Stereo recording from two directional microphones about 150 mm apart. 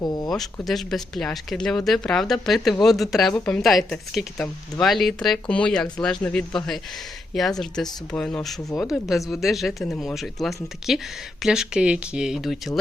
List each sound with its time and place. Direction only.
0.0 s speech: 25° left (ahead or behind)
0.3 s speech: centre (ahead or behind)